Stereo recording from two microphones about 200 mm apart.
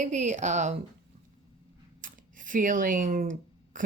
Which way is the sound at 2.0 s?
40° right (ahead or behind).